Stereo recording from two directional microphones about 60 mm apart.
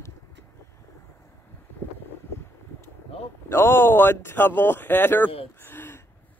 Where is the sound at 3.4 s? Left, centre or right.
Left.